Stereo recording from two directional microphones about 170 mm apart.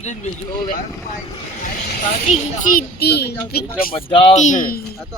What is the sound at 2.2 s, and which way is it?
Speech, 45° left (ahead or behind).